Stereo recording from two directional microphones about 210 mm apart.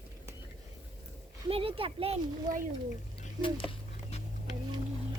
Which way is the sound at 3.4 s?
25° left (ahead or behind).